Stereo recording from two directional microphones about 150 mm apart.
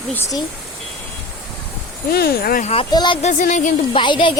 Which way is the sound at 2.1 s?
90° left.